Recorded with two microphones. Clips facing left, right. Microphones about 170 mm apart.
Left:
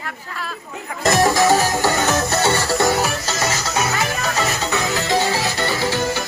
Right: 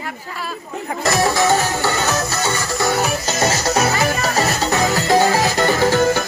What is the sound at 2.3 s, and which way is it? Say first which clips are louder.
Music: left 4 dB; 30° left (ahead or behind).